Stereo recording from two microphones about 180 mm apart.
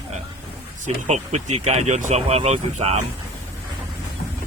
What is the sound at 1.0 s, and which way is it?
Speech, 40° right (ahead or behind).